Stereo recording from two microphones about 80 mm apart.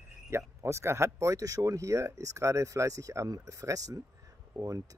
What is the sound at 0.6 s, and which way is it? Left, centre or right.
Speech, right.